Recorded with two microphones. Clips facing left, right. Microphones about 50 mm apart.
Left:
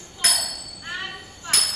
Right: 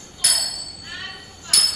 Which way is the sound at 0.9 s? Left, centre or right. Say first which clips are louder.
Left 3 dB; left.